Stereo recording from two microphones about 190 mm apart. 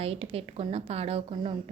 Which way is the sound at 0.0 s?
30° right (ahead or behind).